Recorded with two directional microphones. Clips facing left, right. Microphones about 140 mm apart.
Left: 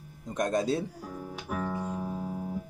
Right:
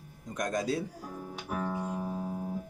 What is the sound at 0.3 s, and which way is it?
Speech, 30° left (ahead or behind).